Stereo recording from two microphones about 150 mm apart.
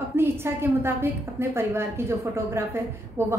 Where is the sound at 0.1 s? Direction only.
15° right (ahead or behind).